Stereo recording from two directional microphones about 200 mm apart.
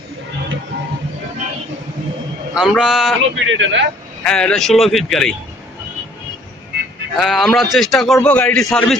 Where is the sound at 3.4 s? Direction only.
70° right (ahead or behind).